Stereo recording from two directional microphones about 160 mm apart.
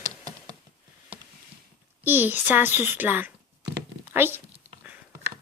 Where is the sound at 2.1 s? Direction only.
10° right (ahead or behind).